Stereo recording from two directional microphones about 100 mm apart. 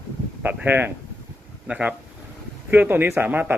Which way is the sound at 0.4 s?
20° right (ahead or behind).